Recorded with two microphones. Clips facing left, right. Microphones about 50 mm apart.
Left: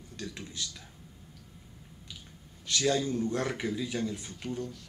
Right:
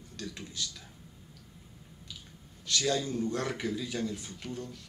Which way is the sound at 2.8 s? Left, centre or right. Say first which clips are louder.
Left 3 dB; centre.